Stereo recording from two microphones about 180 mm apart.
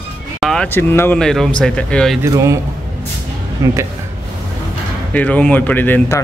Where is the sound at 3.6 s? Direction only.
15° right (ahead or behind).